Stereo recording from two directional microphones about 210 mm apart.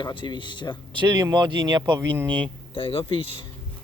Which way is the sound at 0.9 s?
20° right (ahead or behind).